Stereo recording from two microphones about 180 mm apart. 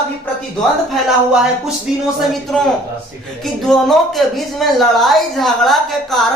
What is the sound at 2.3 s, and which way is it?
A woman's voice, centre (ahead or behind).